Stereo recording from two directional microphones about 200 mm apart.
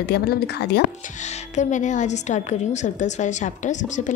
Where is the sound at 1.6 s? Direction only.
40° left (ahead or behind).